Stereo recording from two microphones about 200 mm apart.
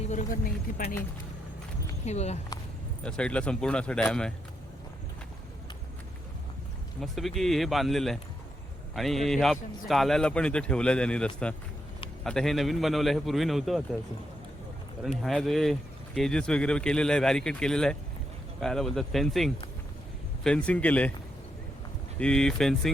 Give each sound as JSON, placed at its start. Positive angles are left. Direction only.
{"t": 0.0, "sound": "speech", "side_deg": 35}
{"t": 2.0, "sound": "speech", "side_deg": 35}
{"t": 3.0, "sound": "speech", "side_deg": 5}
{"t": 7.0, "sound": "speech", "side_deg": 0}
{"t": 15.2, "sound": "a man's voice", "side_deg": 0}
{"t": 22.2, "sound": "speech", "side_deg": 5}